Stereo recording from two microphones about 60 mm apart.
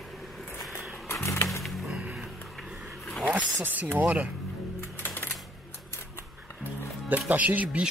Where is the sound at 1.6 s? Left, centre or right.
Centre.